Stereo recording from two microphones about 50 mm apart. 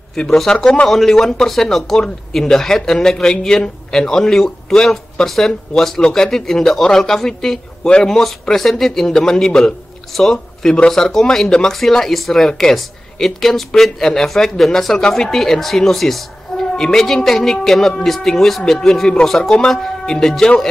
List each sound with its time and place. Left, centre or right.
0.1 s a man's voice: centre